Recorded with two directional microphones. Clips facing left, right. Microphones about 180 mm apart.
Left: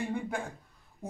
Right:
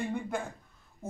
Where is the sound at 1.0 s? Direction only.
15° left (ahead or behind).